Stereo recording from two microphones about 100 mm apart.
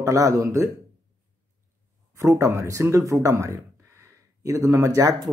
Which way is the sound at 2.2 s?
30° right (ahead or behind).